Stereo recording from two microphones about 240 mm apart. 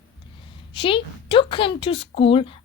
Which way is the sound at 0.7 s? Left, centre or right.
Left.